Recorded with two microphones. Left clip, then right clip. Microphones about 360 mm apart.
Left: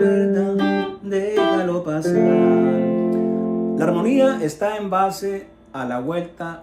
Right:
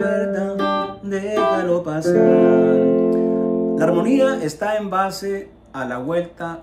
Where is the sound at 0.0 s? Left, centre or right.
Centre.